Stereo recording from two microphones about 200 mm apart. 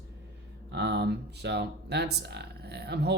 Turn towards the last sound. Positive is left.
turn(degrees=-55)  # may be behind; listen again after turning